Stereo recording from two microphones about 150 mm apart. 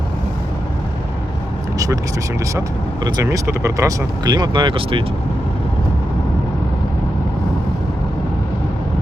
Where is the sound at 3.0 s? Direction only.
25° right (ahead or behind).